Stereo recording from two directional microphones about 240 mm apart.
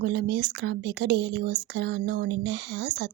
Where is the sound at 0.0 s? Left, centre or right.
Right.